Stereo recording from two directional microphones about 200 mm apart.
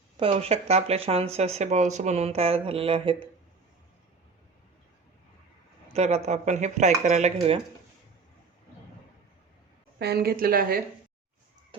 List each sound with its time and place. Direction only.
0.2 s speech: 30° right (ahead or behind)
5.9 s speech: 35° right (ahead or behind)
10.0 s speech: 50° right (ahead or behind)